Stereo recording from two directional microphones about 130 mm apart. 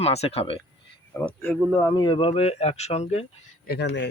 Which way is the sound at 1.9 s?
35° left (ahead or behind).